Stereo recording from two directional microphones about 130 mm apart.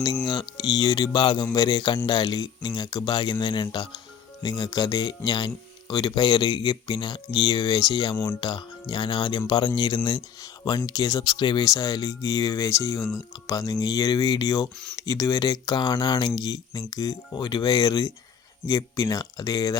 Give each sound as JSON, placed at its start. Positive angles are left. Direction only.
{"t": 0.3, "sound": "speech", "side_deg": 30}
{"t": 8.1, "sound": "speech", "side_deg": 15}
{"t": 8.4, "sound": "speech", "side_deg": 35}